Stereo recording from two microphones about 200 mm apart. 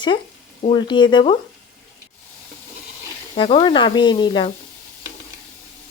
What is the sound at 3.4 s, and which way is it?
Speech, 25° left (ahead or behind).